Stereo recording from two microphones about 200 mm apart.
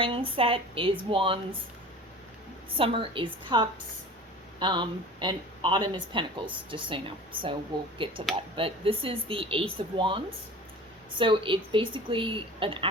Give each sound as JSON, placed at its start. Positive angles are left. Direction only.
{"t": 0.0, "sound": "speech", "side_deg": -25}
{"t": 2.7, "sound": "speech", "side_deg": -25}